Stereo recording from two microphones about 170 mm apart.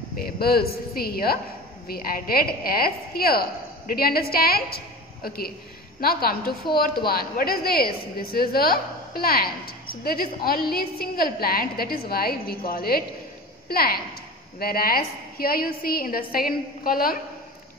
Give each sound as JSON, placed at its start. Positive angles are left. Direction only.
{"t": 0.2, "sound": "a woman's voice", "side_deg": 65}